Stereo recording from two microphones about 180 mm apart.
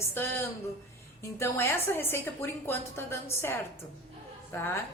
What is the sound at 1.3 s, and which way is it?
A woman's voice, 15° left (ahead or behind).